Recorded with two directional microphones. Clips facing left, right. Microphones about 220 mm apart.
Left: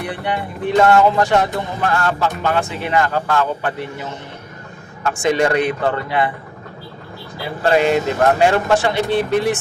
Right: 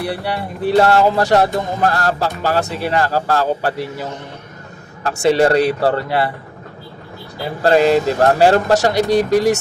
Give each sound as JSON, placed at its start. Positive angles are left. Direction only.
{"t": 0.0, "sound": "speech", "side_deg": -35}
{"t": 5.0, "sound": "speech", "side_deg": -35}
{"t": 7.6, "sound": "speech", "side_deg": -35}